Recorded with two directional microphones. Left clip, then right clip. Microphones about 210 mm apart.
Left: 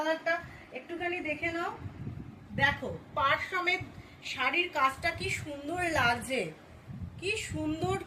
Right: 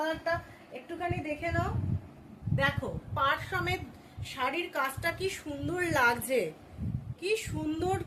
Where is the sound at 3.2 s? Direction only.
25° right (ahead or behind).